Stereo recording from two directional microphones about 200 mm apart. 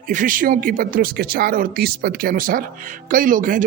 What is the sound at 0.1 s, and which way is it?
Speech, 40° right (ahead or behind).